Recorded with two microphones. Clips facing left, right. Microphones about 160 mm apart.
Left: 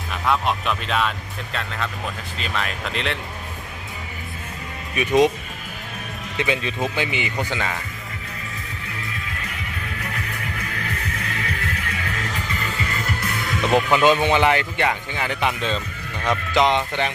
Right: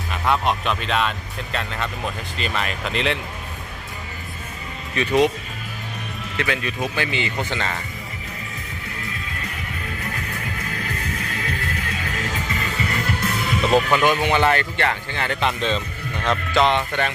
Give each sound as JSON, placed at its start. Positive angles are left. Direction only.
{"t": 0.1, "sound": "speech", "side_deg": 0}
{"t": 4.9, "sound": "speech", "side_deg": 20}
{"t": 6.3, "sound": "speech", "side_deg": 20}
{"t": 13.6, "sound": "speech", "side_deg": -10}
{"t": 13.9, "sound": "speech", "side_deg": 20}